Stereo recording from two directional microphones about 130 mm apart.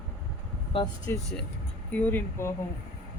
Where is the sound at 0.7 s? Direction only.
45° left (ahead or behind).